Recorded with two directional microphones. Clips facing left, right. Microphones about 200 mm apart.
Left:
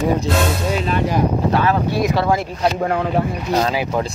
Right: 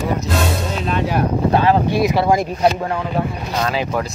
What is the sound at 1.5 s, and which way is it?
Speech, 25° right (ahead or behind).